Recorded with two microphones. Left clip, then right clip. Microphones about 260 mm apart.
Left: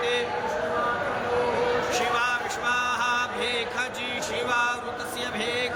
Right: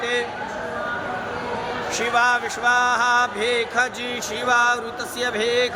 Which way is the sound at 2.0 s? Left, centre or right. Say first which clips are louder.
Right 5 dB; centre.